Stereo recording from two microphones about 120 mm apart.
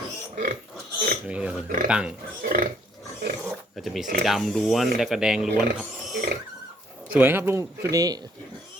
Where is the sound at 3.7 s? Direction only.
Centre (ahead or behind).